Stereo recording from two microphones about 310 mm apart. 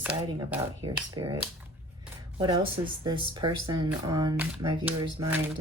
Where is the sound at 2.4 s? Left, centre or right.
Centre.